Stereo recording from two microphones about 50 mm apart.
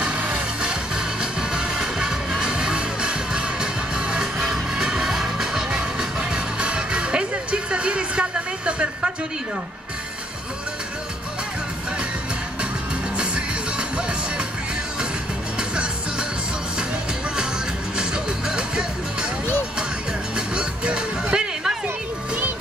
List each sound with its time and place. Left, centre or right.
0.0 s music: right
13.2 s music: right
15.7 s music: centre
17.9 s music: centre
20.3 s music: centre